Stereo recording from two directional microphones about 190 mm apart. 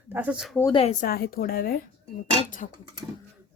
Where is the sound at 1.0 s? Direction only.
50° left (ahead or behind).